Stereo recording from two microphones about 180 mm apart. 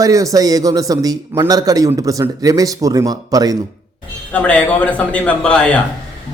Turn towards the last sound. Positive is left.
turn(degrees=5)  # may be behind; listen again after turning